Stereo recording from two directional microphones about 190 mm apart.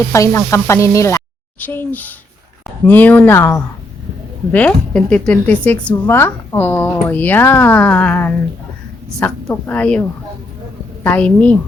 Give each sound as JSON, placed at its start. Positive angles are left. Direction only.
{"t": 0.1, "sound": "speech", "side_deg": 15}